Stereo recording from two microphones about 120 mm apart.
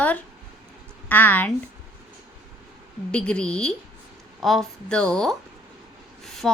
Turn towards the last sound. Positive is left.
turn(degrees=5)  # may be behind; listen again after turning